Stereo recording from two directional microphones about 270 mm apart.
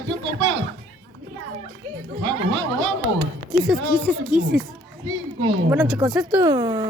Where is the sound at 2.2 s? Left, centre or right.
Right.